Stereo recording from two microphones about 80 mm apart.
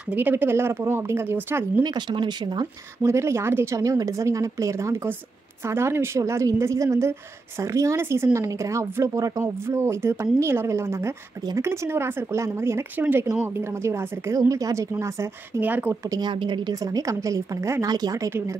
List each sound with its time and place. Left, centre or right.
0.1 s speech: right
1.8 s speech: right
3.0 s speech: right
3.8 s speech: right
13.8 s speech: right
15.6 s speech: right
16.1 s speech: right
16.8 s a woman's voice: right
17.8 s speech: right